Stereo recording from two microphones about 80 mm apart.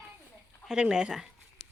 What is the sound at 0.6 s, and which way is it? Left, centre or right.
Speech, centre.